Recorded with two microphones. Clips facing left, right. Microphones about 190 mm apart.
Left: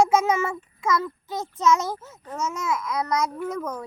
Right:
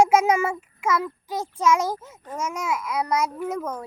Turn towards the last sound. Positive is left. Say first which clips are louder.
# right 1 dB
turn(degrees=-10)  # may be behind; listen again after turning